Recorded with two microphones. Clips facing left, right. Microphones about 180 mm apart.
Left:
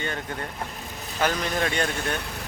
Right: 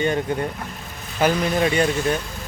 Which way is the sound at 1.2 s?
10° right (ahead or behind).